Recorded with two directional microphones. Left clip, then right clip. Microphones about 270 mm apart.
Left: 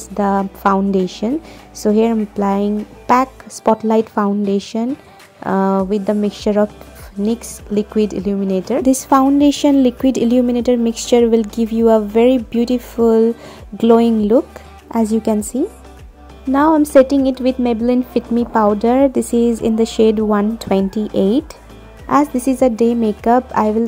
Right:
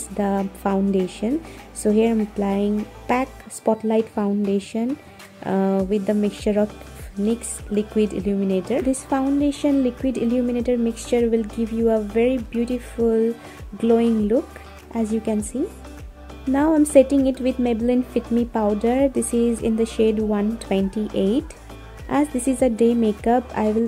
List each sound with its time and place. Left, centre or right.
0.2 s a woman's voice: centre
8.8 s a woman's voice: left
16.5 s a woman's voice: centre